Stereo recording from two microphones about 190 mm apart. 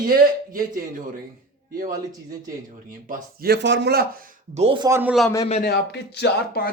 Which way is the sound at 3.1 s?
55° right (ahead or behind).